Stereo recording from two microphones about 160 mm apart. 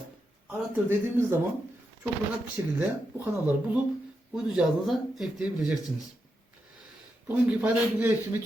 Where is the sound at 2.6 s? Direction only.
20° right (ahead or behind).